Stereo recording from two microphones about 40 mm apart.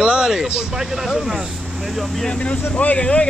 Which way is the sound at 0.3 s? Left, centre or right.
Centre.